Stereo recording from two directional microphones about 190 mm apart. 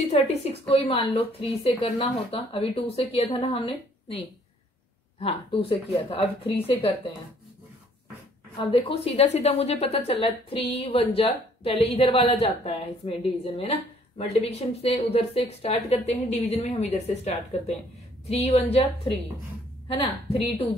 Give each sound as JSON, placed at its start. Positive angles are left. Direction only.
{"t": 0.1, "sound": "a woman's voice", "side_deg": 35}
{"t": 5.2, "sound": "speech", "side_deg": 30}
{"t": 8.5, "sound": "a woman's voice", "side_deg": 30}
{"t": 19.9, "sound": "a woman's voice", "side_deg": 30}